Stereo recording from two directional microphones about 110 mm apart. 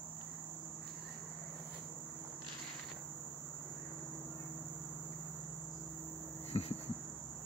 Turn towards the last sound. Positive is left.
turn(degrees=70)  # may be behind; listen again after turning